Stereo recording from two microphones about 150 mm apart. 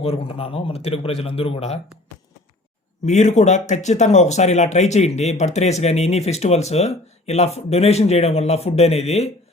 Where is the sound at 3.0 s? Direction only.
50° left (ahead or behind).